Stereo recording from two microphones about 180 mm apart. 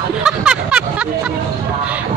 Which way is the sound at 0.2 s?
5° right (ahead or behind).